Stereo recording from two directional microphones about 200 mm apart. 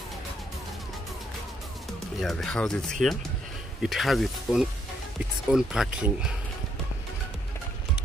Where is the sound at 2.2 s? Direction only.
5° left (ahead or behind).